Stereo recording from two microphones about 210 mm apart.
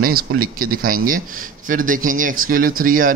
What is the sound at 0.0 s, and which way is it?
Speech, 45° right (ahead or behind).